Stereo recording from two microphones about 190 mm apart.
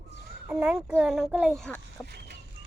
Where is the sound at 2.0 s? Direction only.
60° right (ahead or behind).